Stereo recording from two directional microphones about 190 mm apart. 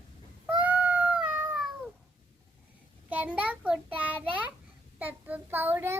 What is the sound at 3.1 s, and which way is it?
Child singing, 5° right (ahead or behind).